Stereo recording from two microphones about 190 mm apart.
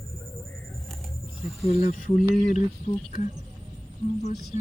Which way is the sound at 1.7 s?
45° left (ahead or behind).